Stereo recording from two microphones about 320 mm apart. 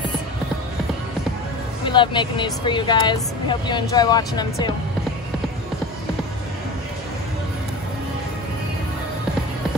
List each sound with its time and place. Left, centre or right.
1.9 s speech: centre